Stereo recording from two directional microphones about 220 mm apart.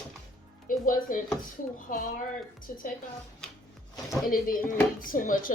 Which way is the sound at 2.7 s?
40° left (ahead or behind).